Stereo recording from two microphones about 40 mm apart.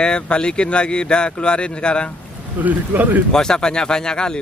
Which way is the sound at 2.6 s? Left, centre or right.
Right.